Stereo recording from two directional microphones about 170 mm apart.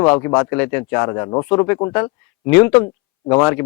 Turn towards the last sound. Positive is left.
turn(degrees=15)  # may be behind; listen again after turning